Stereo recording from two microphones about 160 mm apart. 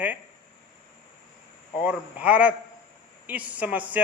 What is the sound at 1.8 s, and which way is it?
A man's voice, 10° right (ahead or behind).